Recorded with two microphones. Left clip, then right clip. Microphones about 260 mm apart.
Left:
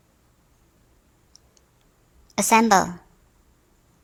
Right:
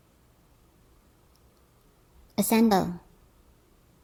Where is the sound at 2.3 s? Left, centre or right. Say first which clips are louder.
Left 7 dB; left.